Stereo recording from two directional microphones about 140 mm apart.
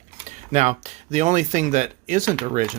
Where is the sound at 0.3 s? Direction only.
55° right (ahead or behind).